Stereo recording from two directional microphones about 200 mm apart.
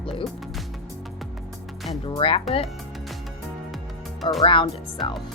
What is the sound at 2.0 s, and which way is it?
Speech, 25° left (ahead or behind).